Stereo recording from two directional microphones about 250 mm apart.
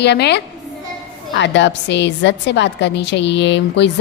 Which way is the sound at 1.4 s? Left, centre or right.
Left.